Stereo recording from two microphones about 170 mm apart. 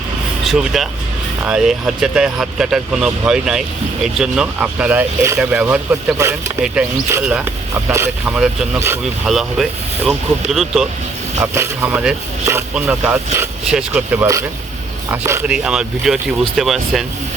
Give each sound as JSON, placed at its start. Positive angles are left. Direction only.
{"t": 0.4, "sound": "speech", "side_deg": 0}
{"t": 7.9, "sound": "speech", "side_deg": -15}
{"t": 11.3, "sound": "speech", "side_deg": -15}
{"t": 15.4, "sound": "speech", "side_deg": -5}